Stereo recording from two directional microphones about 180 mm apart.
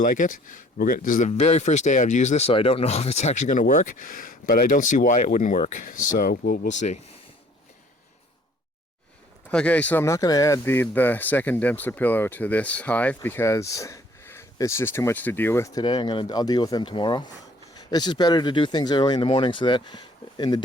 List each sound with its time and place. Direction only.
0.0 s speech: 45° left (ahead or behind)
1.3 s speech: 35° left (ahead or behind)
9.5 s speech: 5° left (ahead or behind); by 20.6 s 25° left (ahead or behind)